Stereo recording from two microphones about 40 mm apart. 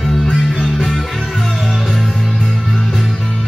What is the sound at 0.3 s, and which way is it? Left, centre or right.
Music, centre.